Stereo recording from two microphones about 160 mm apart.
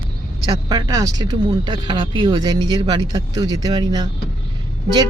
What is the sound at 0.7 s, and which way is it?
Speech, 25° right (ahead or behind).